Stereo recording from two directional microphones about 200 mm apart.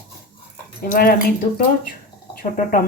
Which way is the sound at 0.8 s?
50° left (ahead or behind).